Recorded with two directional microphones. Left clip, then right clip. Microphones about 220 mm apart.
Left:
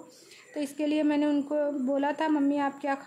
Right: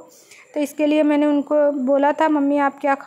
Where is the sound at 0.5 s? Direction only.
25° right (ahead or behind).